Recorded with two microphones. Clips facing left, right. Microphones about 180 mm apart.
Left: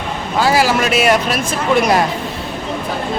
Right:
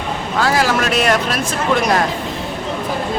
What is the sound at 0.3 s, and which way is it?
Speech, 5° left (ahead or behind).